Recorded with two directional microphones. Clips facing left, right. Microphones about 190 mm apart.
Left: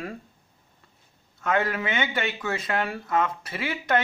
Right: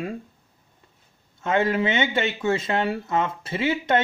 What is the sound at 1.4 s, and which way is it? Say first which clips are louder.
Speech: right 4 dB; 25° right (ahead or behind).